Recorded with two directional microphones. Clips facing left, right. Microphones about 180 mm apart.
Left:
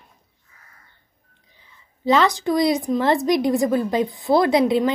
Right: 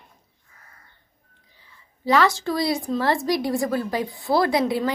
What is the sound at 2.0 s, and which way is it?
A woman's voice, 20° left (ahead or behind).